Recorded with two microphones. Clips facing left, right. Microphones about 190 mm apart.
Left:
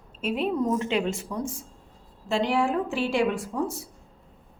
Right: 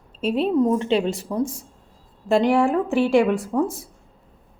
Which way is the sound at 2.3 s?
55° right (ahead or behind).